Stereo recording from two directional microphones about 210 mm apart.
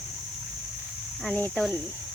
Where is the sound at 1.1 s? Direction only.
5° left (ahead or behind).